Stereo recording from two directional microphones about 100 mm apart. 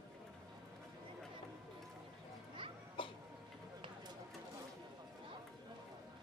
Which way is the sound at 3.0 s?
55° left (ahead or behind).